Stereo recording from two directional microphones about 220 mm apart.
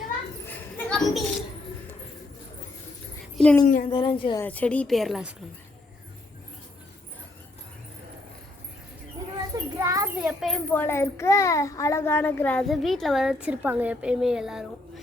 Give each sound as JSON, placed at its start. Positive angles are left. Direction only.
{"t": 0.0, "sound": "children playing", "side_deg": 5}
{"t": 3.3, "sound": "a sound", "side_deg": 5}
{"t": 3.8, "sound": "a woman's voice", "side_deg": 20}
{"t": 4.4, "sound": "a child's voice", "side_deg": 5}
{"t": 9.7, "sound": "a sound", "side_deg": -15}
{"t": 10.2, "sound": "a child's voice", "side_deg": 0}